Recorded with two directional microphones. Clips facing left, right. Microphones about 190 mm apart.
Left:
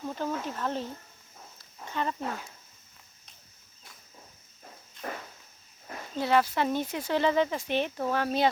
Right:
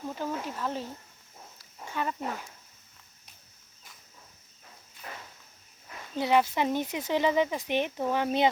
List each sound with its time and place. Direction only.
0.1 s speech: 10° right (ahead or behind)
1.5 s a sound: 10° right (ahead or behind)
5.0 s walk: 45° left (ahead or behind)
6.1 s speech: 15° right (ahead or behind)